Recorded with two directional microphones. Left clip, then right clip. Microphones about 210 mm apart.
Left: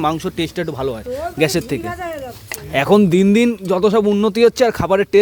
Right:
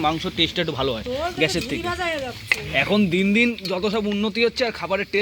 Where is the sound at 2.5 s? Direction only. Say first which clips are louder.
Left 6 dB; 65° left (ahead or behind).